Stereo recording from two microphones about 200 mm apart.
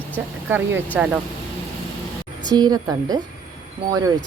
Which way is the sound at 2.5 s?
20° right (ahead or behind).